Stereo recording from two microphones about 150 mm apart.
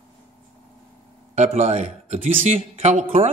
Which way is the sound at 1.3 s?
50° right (ahead or behind).